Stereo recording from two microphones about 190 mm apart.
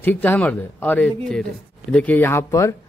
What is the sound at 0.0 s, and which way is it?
A man's voice, 10° left (ahead or behind).